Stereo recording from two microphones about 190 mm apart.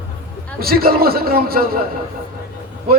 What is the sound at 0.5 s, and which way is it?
Speech, 50° right (ahead or behind).